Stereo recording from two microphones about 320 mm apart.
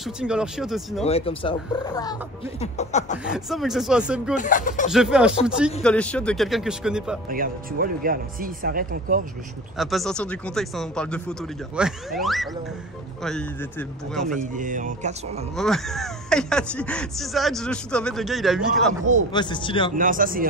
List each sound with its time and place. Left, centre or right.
0.0 s speech: centre
1.0 s speech: centre
3.3 s speech: centre
4.4 s speech: left
4.9 s speech: centre
7.2 s speech: right
9.8 s speech: centre
14.5 s speech: right
15.5 s speech: centre
19.3 s speech: centre
20.0 s speech: right